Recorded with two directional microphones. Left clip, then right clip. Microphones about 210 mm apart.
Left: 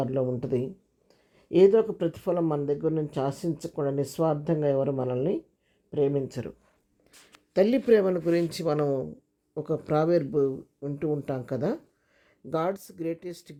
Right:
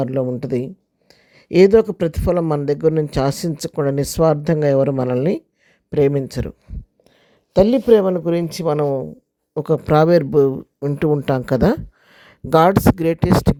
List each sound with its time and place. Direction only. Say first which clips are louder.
0.0 s speech: right 7 dB; 25° right (ahead or behind)
7.5 s speech: right 9 dB; 30° right (ahead or behind)
9.6 s speech: right 11 dB; 40° right (ahead or behind)